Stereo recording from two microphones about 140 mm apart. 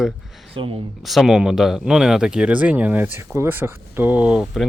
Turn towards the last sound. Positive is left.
turn(degrees=0)  # may be behind; listen again after turning